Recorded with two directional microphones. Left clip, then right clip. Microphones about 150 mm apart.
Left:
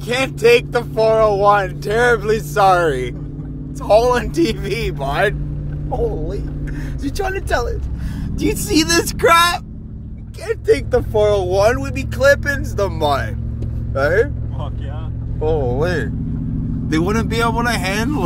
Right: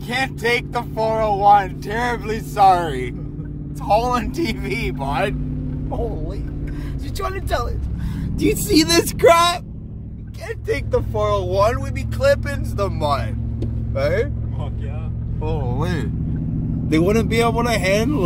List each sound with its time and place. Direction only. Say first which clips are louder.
0.1 s speech: left 7 dB; 20° left (ahead or behind)
15.4 s speech: left 8 dB; 15° left (ahead or behind)